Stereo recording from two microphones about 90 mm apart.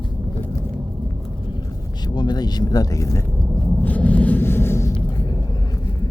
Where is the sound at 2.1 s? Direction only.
50° left (ahead or behind); by 3.2 s 35° left (ahead or behind).